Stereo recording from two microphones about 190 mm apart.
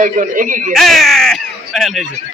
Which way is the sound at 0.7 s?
Centre (ahead or behind).